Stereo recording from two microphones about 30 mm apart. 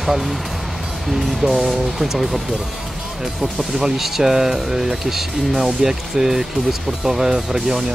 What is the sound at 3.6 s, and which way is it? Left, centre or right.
Speech, centre.